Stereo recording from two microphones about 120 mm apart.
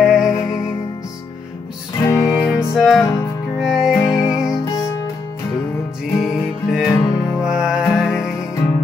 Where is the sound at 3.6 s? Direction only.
5° right (ahead or behind).